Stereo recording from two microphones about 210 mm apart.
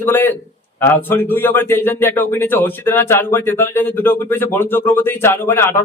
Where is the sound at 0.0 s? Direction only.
10° left (ahead or behind).